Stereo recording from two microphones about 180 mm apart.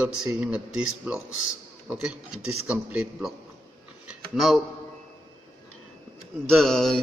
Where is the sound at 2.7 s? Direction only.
5° right (ahead or behind).